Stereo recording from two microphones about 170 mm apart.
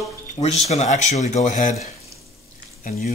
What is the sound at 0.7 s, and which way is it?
Speech, 45° left (ahead or behind).